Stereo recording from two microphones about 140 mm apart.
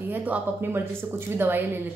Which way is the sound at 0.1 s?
10° right (ahead or behind).